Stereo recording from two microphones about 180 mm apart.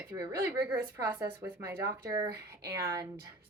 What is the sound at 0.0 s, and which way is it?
Speech, 15° right (ahead or behind).